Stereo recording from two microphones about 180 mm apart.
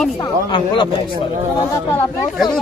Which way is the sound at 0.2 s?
25° left (ahead or behind).